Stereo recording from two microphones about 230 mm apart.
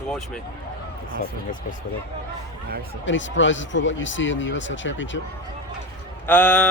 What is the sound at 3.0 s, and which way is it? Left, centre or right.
Speech, left.